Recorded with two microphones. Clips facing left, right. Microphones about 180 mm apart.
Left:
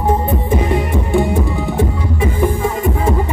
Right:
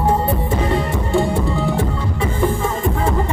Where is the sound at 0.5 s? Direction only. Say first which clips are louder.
Left 6 dB; 15° left (ahead or behind).